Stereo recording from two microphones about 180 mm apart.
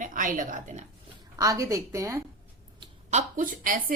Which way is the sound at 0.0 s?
45° right (ahead or behind).